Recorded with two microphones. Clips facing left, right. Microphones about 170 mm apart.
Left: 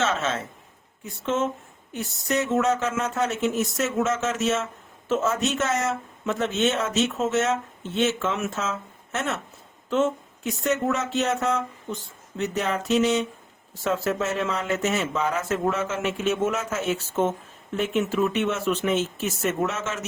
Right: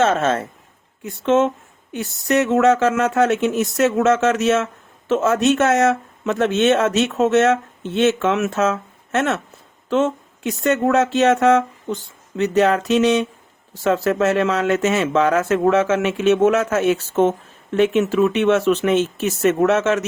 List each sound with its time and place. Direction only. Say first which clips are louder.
0.0 s a man's voice: right 8 dB; 55° right (ahead or behind)
1.2 s speech: right 9 dB; 80° right
9.9 s speech: right 4 dB; 90° right; by 20.1 s 75° right (ahead or behind)